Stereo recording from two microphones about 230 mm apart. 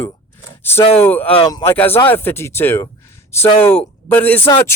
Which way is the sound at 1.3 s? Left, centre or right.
Left.